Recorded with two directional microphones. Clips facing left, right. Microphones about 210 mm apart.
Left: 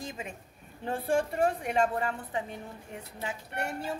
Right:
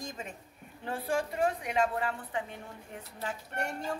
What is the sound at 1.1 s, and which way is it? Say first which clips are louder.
A woman's voice: left 3 dB; 50° left (ahead or behind).